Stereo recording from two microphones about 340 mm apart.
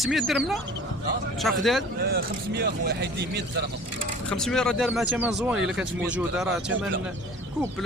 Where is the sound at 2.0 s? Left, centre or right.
Right.